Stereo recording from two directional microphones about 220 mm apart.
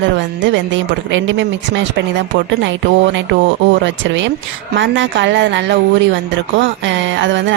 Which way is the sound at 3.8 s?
60° right (ahead or behind).